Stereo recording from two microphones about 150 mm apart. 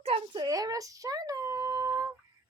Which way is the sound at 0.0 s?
40° right (ahead or behind).